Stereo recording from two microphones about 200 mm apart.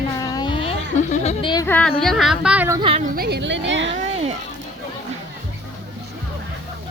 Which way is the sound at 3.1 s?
55° right (ahead or behind).